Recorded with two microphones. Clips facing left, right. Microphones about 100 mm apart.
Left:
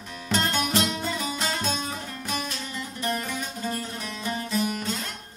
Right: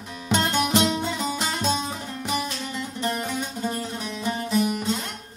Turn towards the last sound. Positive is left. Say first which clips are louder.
# right 4 dB
turn(degrees=-25)  # may be behind; listen again after turning